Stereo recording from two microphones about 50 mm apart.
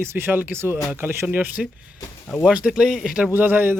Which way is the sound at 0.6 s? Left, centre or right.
Right.